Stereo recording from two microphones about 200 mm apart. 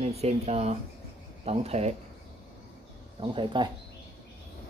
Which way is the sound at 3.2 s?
25° right (ahead or behind).